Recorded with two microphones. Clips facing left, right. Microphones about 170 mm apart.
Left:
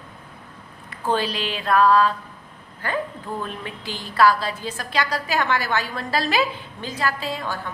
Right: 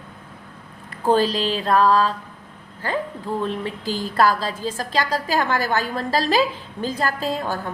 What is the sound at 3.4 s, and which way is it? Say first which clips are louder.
A woman's voice: right 6 dB; 30° right (ahead or behind).